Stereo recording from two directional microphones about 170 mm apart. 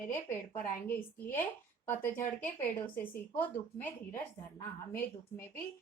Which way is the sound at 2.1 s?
50° left (ahead or behind).